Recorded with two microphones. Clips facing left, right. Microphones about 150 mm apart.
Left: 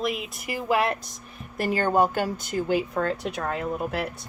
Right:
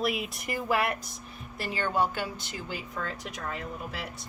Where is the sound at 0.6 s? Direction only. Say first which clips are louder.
Left 5 dB; 20° left (ahead or behind).